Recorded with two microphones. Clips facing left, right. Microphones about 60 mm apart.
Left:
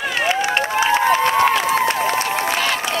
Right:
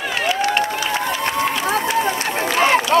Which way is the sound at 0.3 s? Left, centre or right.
Centre.